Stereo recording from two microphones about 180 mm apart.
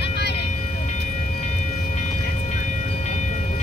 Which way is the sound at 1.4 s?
40° left (ahead or behind).